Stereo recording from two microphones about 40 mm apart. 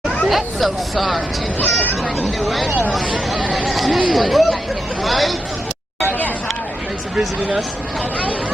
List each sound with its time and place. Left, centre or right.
0.3 s speech: centre
1.6 s speech: left
2.2 s speech: centre